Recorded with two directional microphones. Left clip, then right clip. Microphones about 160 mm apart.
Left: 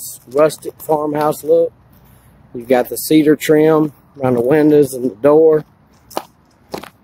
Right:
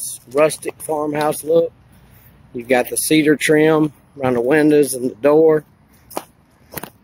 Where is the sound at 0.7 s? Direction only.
Centre (ahead or behind).